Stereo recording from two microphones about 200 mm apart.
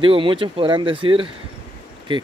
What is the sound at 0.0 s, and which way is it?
Speech, 25° right (ahead or behind).